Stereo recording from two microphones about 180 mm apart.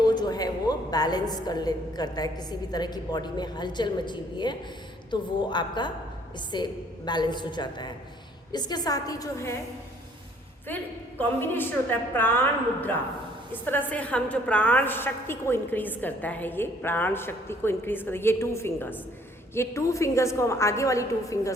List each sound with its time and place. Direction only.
0.0 s a woman's voice: 25° left (ahead or behind)
10.7 s a woman's voice: 10° left (ahead or behind)
13.5 s a woman's voice: 10° left (ahead or behind)